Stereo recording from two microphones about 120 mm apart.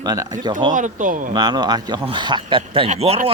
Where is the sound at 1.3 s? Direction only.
35° right (ahead or behind).